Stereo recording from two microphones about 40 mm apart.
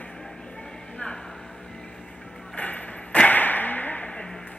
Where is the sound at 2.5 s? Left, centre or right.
Left.